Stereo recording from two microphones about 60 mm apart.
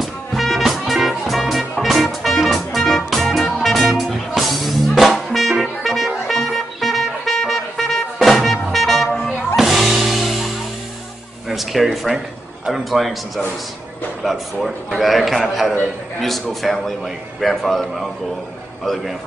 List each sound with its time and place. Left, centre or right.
0.0 s music: centre
11.4 s a sound: centre
12.6 s a man's voice: centre
14.2 s a man's voice: centre